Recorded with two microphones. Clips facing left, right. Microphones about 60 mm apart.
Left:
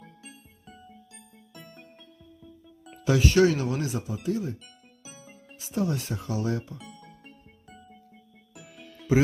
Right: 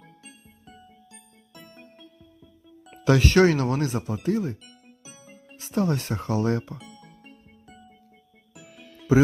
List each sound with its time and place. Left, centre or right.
0.0 s music: centre
3.0 s speech: right
5.2 s music: centre
5.5 s speech: right
6.7 s music: centre